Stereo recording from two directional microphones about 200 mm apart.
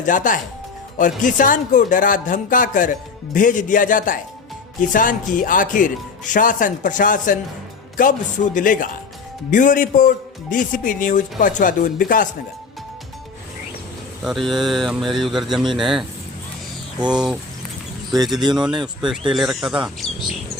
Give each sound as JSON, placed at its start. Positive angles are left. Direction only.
{"t": 0.0, "sound": "speech", "side_deg": 40}
{"t": 14.3, "sound": "speech", "side_deg": 0}
{"t": 18.3, "sound": "speech", "side_deg": -20}
{"t": 19.3, "sound": "speech", "side_deg": 0}